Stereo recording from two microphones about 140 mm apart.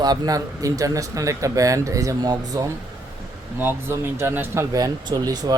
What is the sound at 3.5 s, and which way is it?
Speech, 15° right (ahead or behind).